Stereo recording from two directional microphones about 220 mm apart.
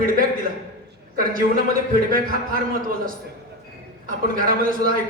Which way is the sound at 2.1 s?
40° right (ahead or behind).